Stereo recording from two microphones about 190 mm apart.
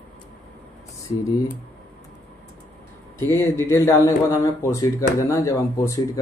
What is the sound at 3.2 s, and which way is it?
Speech, 10° left (ahead or behind).